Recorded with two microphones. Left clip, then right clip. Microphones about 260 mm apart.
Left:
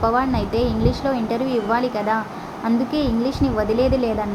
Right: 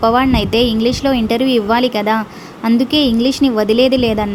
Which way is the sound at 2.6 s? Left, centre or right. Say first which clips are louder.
Right 8 dB; right.